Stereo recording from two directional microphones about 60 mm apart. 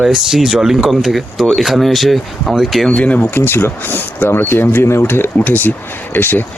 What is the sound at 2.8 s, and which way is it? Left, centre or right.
Speech, left.